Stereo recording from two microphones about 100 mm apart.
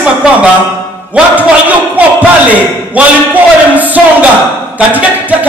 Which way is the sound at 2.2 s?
15° right (ahead or behind).